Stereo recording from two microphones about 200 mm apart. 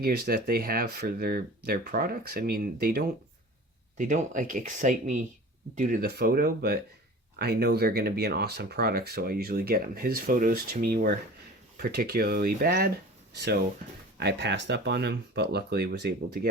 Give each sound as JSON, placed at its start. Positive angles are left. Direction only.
{"t": 0.0, "sound": "speech", "side_deg": -50}
{"t": 14.2, "sound": "speech", "side_deg": -55}